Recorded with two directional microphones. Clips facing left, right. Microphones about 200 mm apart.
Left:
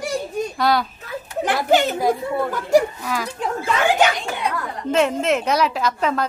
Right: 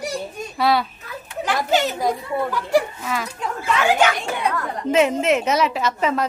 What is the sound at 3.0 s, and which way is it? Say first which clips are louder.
Speech: left 1 dB; centre (ahead or behind).